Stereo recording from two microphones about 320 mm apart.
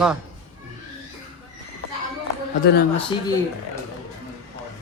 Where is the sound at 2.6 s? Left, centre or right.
Left.